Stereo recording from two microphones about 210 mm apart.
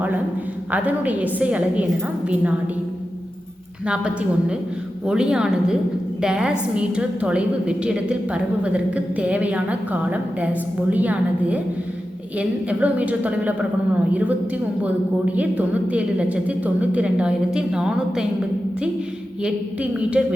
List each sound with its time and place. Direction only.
0.7 s a woman's voice: 5° right (ahead or behind)
3.8 s a woman's voice: 5° right (ahead or behind)
19.4 s a woman's voice: 5° right (ahead or behind)